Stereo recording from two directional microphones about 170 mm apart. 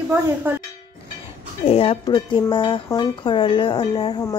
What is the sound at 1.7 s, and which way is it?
Speech, 35° left (ahead or behind).